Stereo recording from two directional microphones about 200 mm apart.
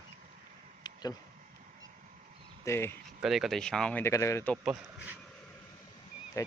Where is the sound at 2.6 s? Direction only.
15° left (ahead or behind).